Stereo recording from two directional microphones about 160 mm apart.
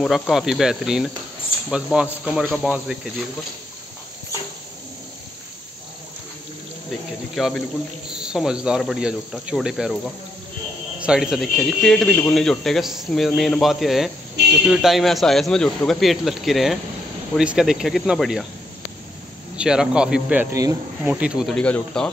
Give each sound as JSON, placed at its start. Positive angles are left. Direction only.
{"t": 0.0, "sound": "speech", "side_deg": 0}
{"t": 7.3, "sound": "speech", "side_deg": 0}
{"t": 14.4, "sound": "a sound", "side_deg": -90}
{"t": 14.7, "sound": "speech", "side_deg": 0}
{"t": 19.5, "sound": "speech", "side_deg": -5}